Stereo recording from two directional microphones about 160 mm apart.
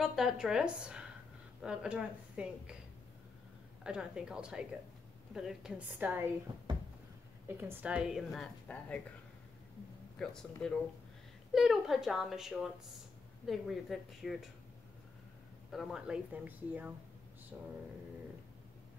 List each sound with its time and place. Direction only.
0.0 s a woman's voice: centre (ahead or behind)
3.8 s a woman's voice: 5° right (ahead or behind)
6.7 s a sound: 30° right (ahead or behind)
7.4 s a woman's voice: 10° right (ahead or behind); by 9.0 s 10° left (ahead or behind)
10.1 s a woman's voice: 5° left (ahead or behind)
15.7 s a woman's voice: centre (ahead or behind)